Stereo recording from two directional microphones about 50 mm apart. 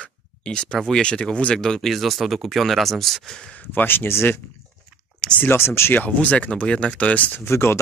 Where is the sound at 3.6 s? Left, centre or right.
Left.